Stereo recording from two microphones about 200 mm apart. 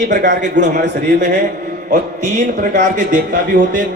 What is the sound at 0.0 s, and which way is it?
A man's voice, 40° right (ahead or behind).